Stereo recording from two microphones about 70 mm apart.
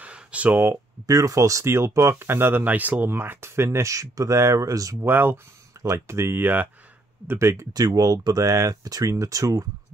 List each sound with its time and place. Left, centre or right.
0.0 s a sound: centre
1.0 s speech: right
1.7 s speech: right
5.0 s speech: right
5.8 s speech: right
7.2 s speech: right
7.7 s speech: right